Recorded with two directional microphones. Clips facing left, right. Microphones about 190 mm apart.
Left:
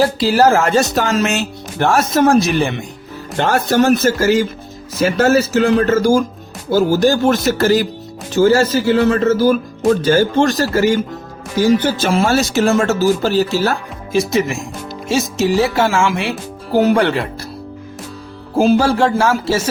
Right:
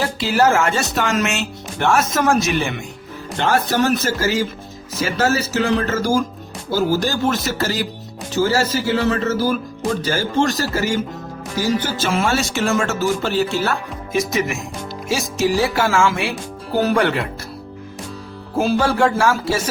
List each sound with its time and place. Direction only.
0.0 s speech: 35° left (ahead or behind)
3.3 s speech: 45° left (ahead or behind)
12.1 s speech: 35° left (ahead or behind)
18.5 s speech: 30° left (ahead or behind)